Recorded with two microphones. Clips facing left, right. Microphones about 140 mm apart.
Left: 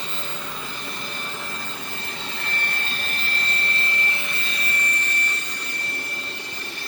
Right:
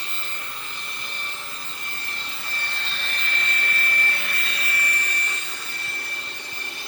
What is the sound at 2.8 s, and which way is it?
Vacuum cleaner, 40° left (ahead or behind).